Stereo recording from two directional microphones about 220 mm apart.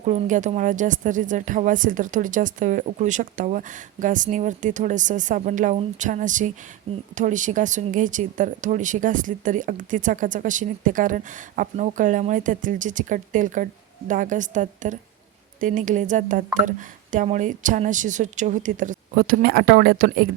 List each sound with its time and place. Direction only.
0.0 s speech: 30° right (ahead or behind)